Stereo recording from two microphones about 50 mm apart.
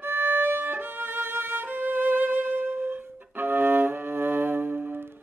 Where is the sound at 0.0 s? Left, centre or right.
Right.